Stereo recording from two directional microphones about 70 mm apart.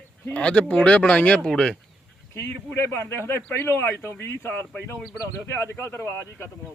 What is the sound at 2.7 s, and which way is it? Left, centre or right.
Speech, left.